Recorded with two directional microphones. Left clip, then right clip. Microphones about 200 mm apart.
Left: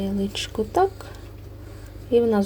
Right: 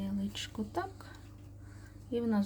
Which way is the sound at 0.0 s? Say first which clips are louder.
Left 12 dB; 15° left (ahead or behind).